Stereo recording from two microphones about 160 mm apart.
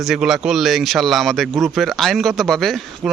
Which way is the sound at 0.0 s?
5° right (ahead or behind).